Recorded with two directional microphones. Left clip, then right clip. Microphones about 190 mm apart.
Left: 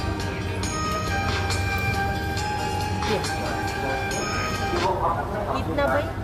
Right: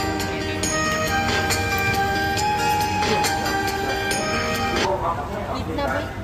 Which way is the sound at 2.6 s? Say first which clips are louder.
Right 6 dB; 40° right (ahead or behind).